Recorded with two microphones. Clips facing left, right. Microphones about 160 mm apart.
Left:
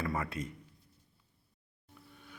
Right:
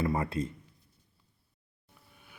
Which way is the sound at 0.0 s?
25° right (ahead or behind).